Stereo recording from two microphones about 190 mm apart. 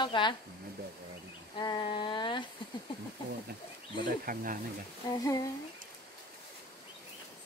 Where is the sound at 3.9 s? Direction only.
45° right (ahead or behind).